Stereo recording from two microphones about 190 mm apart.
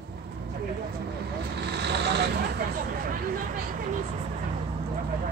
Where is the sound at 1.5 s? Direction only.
60° right (ahead or behind).